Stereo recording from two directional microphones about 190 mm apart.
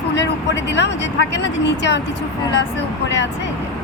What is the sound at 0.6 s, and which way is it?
A woman's voice, 65° left (ahead or behind).